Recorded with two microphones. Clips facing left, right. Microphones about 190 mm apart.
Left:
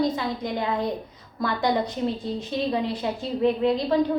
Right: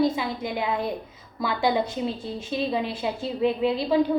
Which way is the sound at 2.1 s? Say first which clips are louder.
Left 2 dB; 20° left (ahead or behind).